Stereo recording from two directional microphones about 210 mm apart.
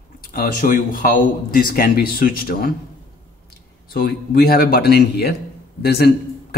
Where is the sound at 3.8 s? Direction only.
45° left (ahead or behind).